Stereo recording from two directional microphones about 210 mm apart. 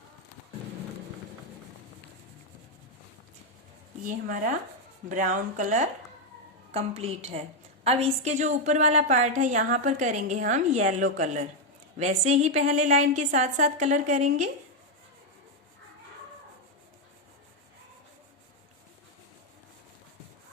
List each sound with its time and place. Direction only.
4.0 s a woman's voice: 40° right (ahead or behind)